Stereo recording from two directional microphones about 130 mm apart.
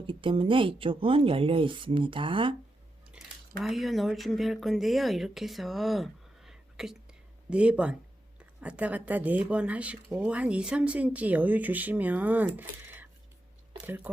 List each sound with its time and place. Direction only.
0.0 s speech: 40° right (ahead or behind)
3.6 s speech: centre (ahead or behind)